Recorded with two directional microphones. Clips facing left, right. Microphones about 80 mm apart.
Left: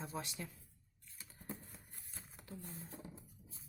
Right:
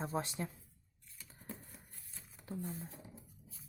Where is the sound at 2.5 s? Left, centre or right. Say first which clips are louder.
Right 8 dB; right.